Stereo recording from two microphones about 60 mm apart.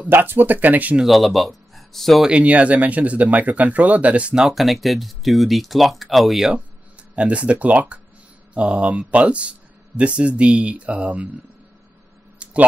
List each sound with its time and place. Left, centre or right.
0.1 s speech: right
1.0 s speech: centre
2.2 s speech: centre
4.5 s speech: centre
6.5 s speech: right
12.4 s a sound: right